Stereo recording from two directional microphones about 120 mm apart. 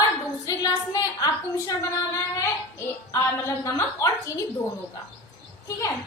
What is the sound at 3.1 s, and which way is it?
Speech, 25° left (ahead or behind).